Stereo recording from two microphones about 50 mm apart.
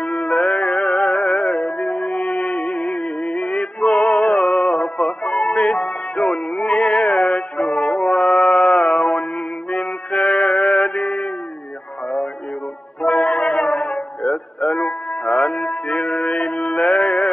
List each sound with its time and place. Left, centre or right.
0.0 s music: left
13.1 s brass instrument: left
13.7 s music: left
14.2 s music: centre
14.7 s music: left